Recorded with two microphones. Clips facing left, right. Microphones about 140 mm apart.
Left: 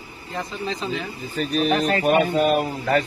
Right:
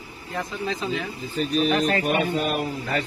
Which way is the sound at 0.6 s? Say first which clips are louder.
Even; 5° right (ahead or behind).